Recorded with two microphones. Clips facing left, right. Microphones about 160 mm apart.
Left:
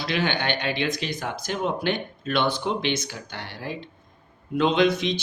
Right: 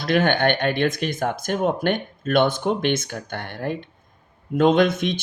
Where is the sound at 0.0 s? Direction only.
50° right (ahead or behind).